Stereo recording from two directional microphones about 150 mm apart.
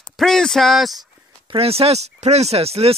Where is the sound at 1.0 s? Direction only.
35° right (ahead or behind).